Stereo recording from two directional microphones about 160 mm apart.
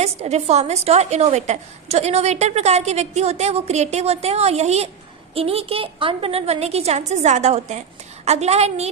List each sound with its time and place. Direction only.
0.0 s a woman's voice: 40° right (ahead or behind)